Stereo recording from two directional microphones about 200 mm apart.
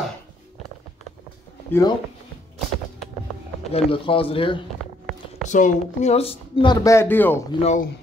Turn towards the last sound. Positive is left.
turn(degrees=35)  # may be behind; listen again after turning